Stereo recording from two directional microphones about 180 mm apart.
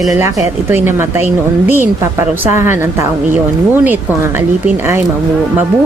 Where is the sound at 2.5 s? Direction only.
15° right (ahead or behind).